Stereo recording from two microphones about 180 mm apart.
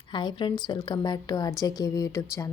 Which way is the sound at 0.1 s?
25° left (ahead or behind).